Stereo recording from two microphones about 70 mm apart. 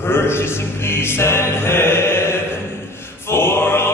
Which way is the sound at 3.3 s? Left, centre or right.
Left.